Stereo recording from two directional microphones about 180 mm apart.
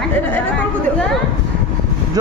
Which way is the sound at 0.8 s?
5° left (ahead or behind).